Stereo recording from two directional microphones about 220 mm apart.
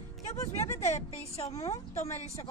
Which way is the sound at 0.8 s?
30° left (ahead or behind).